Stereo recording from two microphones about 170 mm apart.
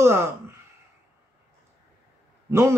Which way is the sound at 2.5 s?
15° right (ahead or behind).